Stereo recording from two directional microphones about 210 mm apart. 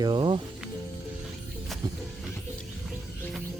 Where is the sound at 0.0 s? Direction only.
25° right (ahead or behind).